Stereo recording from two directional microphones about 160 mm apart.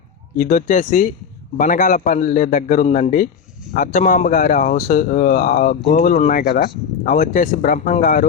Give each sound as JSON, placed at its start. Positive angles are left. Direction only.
{"t": 0.3, "sound": "a man's voice", "side_deg": 50}